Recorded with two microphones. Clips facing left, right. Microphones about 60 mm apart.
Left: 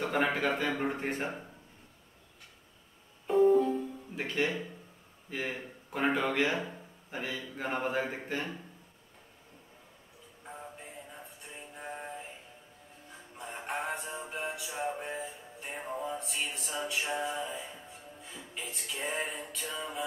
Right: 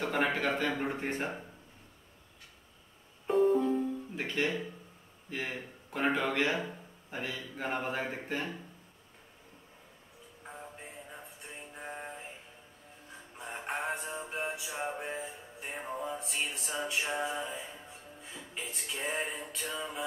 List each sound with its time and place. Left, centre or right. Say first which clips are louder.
0.0 s speech: left 1 dB; centre
3.3 s music: left 2 dB; centre
5.3 s speech: left 1 dB; centre
10.8 s music: even; centre
13.4 s music: even; centre
14.7 s music: left 1 dB; centre
15.0 s music: even; centre
18.6 s speech: even; centre